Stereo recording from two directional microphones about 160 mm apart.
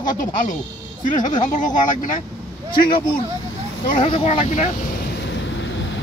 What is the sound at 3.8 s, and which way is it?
Speech, 35° left (ahead or behind).